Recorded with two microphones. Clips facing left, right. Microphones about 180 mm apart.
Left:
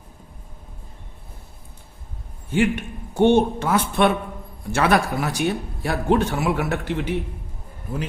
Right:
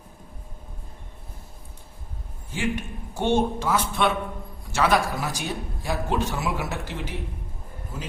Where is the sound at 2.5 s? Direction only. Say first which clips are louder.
Left 7 dB; 60° left (ahead or behind).